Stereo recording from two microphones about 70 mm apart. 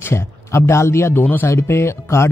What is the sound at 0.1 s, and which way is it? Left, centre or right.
Speech, left.